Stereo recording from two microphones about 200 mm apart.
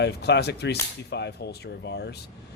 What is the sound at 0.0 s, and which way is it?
Speech, 55° left (ahead or behind).